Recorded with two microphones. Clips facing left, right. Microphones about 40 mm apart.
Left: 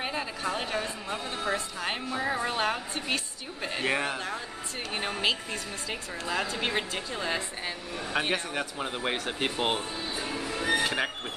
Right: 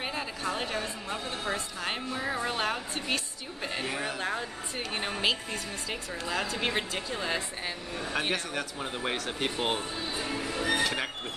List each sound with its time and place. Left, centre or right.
0.0 s a sound: centre
0.6 s a woman's voice: centre
3.8 s speech: left
5.2 s a woman's voice: centre
8.2 s a woman's voice: centre
10.5 s music: centre